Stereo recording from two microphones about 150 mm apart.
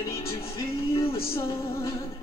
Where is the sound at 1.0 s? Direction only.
40° left (ahead or behind).